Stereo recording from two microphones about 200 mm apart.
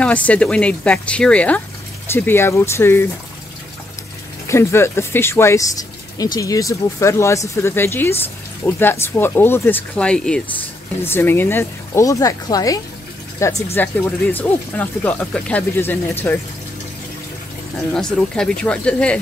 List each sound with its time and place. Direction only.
0.0 s speech: 5° left (ahead or behind)
4.5 s speech: 15° left (ahead or behind)
17.9 s speech: 5° left (ahead or behind)